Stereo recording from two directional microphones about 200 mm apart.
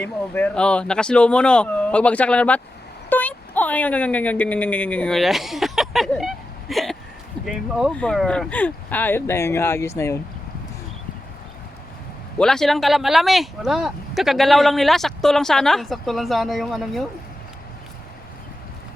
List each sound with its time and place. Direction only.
0.0 s a woman's voice: 10° left (ahead or behind)
12.4 s speech: 5° left (ahead or behind)